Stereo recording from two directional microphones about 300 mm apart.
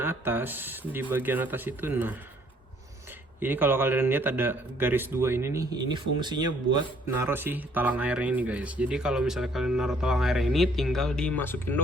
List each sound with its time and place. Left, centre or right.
0.0 s speech: centre
3.4 s speech: centre